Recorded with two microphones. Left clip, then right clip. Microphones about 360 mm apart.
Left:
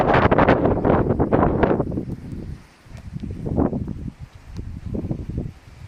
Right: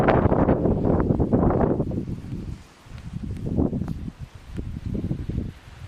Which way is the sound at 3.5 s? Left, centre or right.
Left.